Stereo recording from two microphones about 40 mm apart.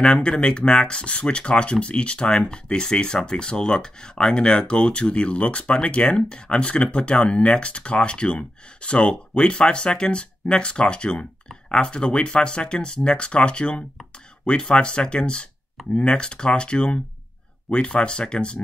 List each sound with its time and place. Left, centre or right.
0.0 s speech: centre